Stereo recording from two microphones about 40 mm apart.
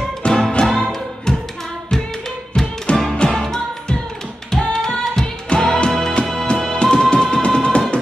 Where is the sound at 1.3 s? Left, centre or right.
Centre.